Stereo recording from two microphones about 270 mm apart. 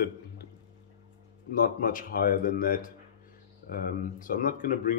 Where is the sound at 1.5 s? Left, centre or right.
Left.